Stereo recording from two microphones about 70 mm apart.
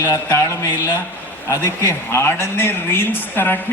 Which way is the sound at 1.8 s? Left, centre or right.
Left.